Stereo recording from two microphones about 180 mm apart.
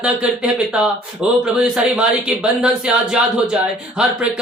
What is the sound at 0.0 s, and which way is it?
A man's voice, 5° right (ahead or behind).